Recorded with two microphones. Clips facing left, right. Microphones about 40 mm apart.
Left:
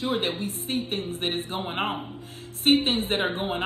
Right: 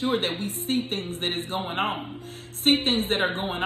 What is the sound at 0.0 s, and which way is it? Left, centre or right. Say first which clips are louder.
A woman's voice: right 1 dB; right.